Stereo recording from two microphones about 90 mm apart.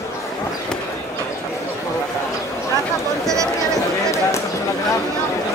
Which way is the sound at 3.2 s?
35° right (ahead or behind).